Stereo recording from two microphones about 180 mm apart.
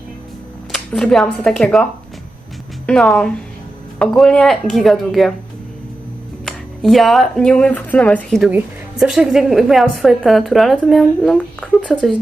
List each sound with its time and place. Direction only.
0.7 s speech: 5° left (ahead or behind)
6.4 s speech: centre (ahead or behind)